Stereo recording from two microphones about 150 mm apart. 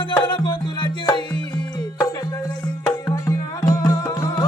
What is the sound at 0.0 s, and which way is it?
Music, 30° left (ahead or behind).